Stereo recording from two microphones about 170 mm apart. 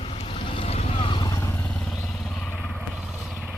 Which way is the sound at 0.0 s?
35° left (ahead or behind).